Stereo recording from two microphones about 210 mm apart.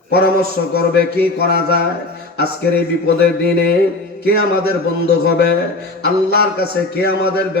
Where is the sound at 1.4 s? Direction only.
50° left (ahead or behind).